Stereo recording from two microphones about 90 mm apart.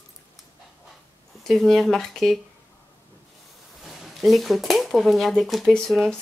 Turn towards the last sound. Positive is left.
turn(degrees=5)  # may be behind; listen again after turning